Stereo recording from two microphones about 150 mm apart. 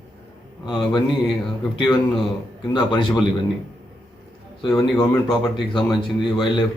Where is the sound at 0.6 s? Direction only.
30° left (ahead or behind).